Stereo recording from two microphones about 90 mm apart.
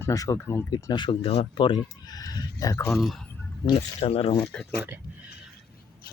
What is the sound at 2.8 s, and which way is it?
Speech, centre (ahead or behind).